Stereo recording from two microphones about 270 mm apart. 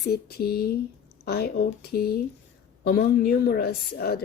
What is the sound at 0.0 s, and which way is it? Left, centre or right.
Speech, left.